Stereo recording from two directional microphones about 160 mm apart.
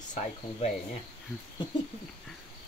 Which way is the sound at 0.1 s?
45° left (ahead or behind).